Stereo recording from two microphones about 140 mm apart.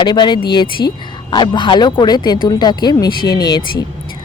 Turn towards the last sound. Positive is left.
turn(degrees=30)  # may be behind; listen again after turning